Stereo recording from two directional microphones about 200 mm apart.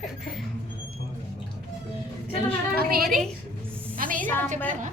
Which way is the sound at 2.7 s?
50° right (ahead or behind).